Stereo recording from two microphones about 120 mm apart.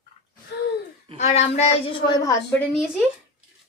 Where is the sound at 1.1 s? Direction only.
70° left (ahead or behind).